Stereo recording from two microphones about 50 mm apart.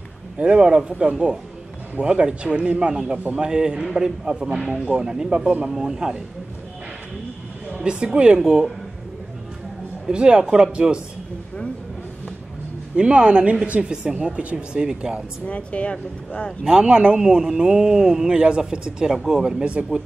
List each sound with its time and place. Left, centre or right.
0.4 s a man's voice: right
7.7 s speech: centre
10.0 s a man's voice: centre
12.9 s speech: right
14.4 s speech: right
14.8 s a man's voice: centre
15.4 s speech: left
16.6 s a man's voice: centre